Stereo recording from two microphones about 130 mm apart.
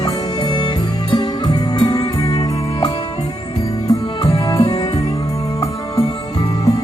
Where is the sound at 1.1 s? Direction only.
30° left (ahead or behind).